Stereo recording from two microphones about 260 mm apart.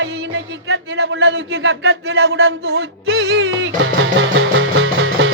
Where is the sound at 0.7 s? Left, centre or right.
Right.